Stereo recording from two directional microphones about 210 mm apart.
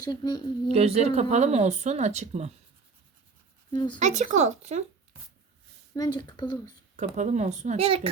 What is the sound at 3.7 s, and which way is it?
Speech, 20° left (ahead or behind).